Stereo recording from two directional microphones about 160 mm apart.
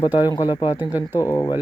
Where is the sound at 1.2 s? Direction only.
25° left (ahead or behind).